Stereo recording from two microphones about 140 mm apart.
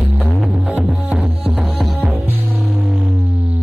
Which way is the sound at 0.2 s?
Centre (ahead or behind).